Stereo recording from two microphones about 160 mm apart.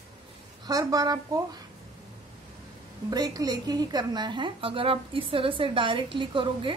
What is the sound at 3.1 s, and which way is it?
A woman's voice, 25° right (ahead or behind).